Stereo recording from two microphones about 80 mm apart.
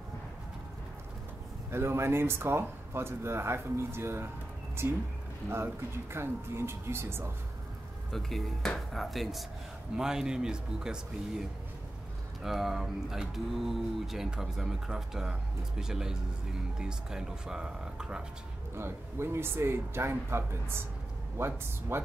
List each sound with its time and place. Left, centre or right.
1.7 s speech: right
6.1 s speech: right
8.1 s speech: centre
12.4 s speech: centre
18.8 s speech: right